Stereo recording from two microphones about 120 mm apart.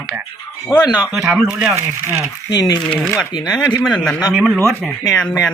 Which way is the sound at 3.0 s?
Centre (ahead or behind).